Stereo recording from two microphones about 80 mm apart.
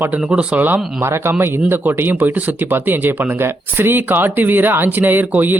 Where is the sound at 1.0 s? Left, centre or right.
Right.